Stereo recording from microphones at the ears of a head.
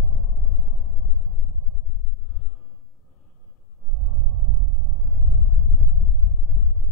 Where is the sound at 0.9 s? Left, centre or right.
Left.